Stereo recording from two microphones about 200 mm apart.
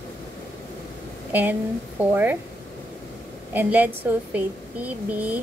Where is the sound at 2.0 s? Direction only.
10° right (ahead or behind).